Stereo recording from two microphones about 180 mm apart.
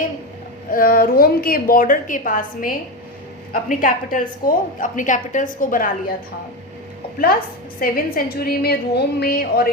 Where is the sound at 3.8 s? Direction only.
50° left (ahead or behind).